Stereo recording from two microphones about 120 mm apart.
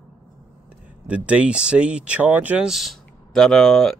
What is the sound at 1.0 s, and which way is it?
Speech, 10° right (ahead or behind).